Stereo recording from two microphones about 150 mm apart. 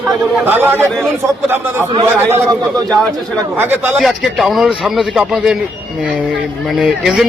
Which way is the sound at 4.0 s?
Centre (ahead or behind).